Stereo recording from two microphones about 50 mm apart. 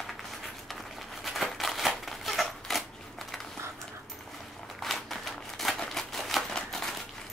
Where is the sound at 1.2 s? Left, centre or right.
Centre.